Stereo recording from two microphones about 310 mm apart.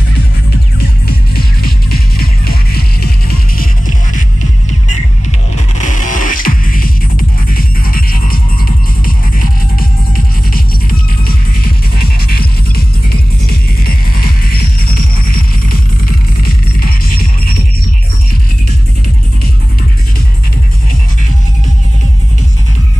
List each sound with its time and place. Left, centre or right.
0.7 s music: left
6.0 s music: left
11.2 s music: left
16.4 s music: left